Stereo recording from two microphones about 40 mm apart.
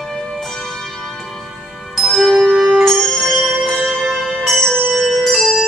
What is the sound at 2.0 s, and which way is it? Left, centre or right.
Music, centre.